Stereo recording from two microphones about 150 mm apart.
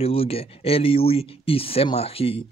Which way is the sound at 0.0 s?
40° left (ahead or behind).